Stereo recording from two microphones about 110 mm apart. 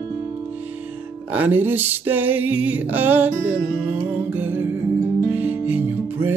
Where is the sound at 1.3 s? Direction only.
15° right (ahead or behind).